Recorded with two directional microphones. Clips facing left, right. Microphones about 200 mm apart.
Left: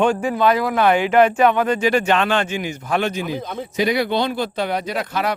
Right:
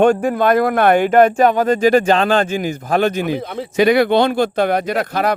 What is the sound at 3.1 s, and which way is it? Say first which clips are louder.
Speech: right 5 dB; 65° right (ahead or behind).